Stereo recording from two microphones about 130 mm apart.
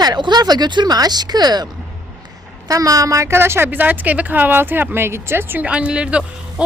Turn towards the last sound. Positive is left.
turn(degrees=-10)  # may be behind; listen again after turning